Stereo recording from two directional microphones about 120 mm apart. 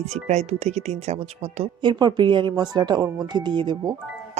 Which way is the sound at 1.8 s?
40° right (ahead or behind).